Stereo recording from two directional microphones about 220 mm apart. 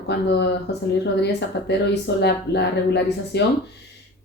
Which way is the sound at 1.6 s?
50° left (ahead or behind).